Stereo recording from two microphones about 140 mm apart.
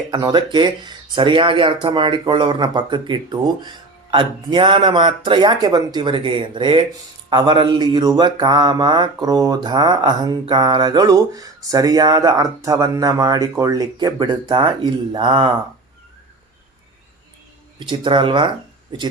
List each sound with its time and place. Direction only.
0.1 s speech: 35° right (ahead or behind)
7.3 s mantra: 35° right (ahead or behind)
17.7 s speech: 35° right (ahead or behind)